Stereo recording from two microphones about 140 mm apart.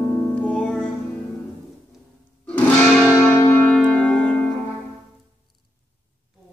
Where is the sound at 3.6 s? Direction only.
Centre (ahead or behind).